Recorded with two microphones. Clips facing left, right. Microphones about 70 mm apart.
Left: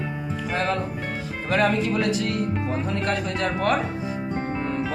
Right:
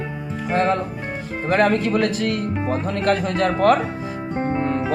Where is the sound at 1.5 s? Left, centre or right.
Right.